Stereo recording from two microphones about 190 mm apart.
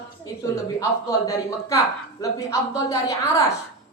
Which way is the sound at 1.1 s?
15° left (ahead or behind).